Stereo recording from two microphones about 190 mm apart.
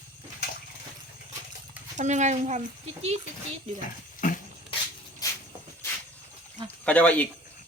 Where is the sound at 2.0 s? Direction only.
40° right (ahead or behind).